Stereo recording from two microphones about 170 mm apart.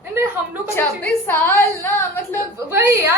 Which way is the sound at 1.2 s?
10° left (ahead or behind).